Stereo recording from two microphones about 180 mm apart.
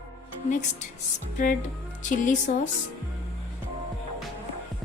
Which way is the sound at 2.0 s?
45° left (ahead or behind).